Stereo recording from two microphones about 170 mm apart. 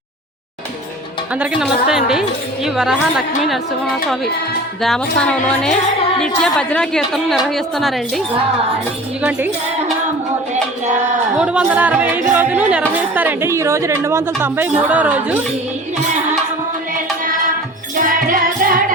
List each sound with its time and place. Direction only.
1.4 s a woman's voice: 5° right (ahead or behind)
4.8 s a woman's voice: 5° left (ahead or behind)
11.3 s a woman's voice: 5° right (ahead or behind)
17.9 s music: 55° right (ahead or behind)